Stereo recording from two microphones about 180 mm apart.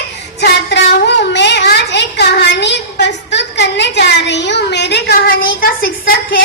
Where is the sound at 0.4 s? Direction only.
70° left (ahead or behind).